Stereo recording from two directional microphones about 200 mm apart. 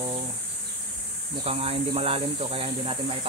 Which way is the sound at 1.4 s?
30° right (ahead or behind).